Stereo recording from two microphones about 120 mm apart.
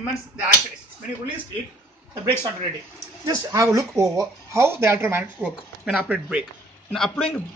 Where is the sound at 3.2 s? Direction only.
30° right (ahead or behind); by 7.4 s 10° left (ahead or behind).